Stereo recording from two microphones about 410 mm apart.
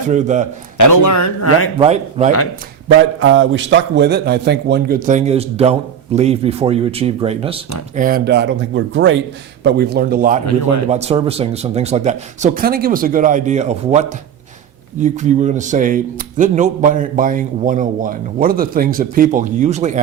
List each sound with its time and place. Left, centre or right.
0.1 s speech: centre
0.8 s a man's voice: left
1.8 s speech: centre
3.2 s speech: right